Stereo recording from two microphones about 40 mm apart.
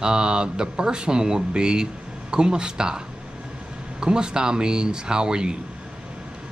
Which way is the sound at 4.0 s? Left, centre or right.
Centre.